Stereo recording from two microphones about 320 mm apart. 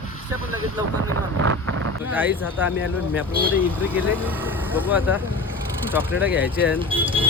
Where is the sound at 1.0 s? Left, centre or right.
Right.